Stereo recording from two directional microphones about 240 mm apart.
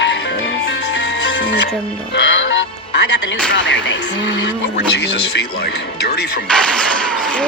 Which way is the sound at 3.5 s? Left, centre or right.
Left.